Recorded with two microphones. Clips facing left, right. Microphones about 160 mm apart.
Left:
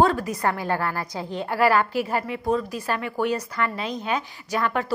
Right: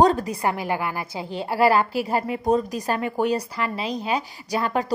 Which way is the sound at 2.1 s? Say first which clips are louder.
Right 6 dB; 35° right (ahead or behind).